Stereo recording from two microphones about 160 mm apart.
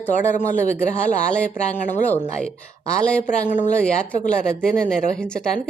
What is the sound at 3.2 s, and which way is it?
Speech, 50° left (ahead or behind).